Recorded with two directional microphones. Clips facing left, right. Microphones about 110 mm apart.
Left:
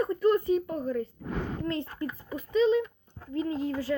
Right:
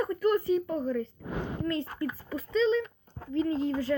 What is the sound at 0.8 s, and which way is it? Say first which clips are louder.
Speech: even; 10° left (ahead or behind).